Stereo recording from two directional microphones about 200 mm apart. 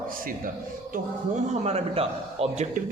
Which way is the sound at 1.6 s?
30° right (ahead or behind).